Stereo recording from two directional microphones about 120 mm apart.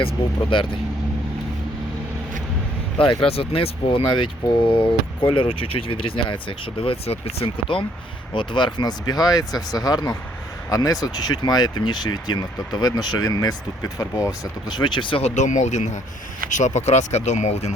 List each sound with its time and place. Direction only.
0.5 s speech: 45° left (ahead or behind)
3.0 s speech: 50° left (ahead or behind)
15.2 s speech: 85° left
16.5 s speech: 90° left; by 17.7 s 70° left (ahead or behind)